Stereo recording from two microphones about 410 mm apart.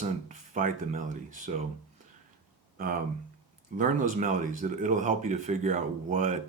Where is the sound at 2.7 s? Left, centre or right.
Right.